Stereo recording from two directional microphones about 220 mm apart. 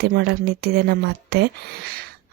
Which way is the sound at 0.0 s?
45° right (ahead or behind).